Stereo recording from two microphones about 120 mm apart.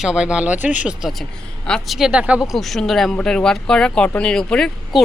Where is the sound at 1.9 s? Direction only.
5° right (ahead or behind).